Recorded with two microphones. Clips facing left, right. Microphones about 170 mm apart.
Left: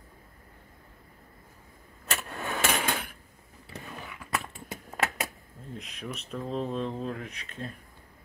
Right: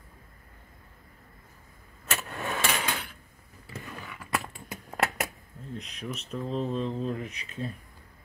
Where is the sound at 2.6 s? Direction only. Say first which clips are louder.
Left 4 dB; 50° left (ahead or behind).